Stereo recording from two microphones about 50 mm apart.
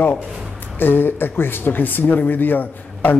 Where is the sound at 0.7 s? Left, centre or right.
Left.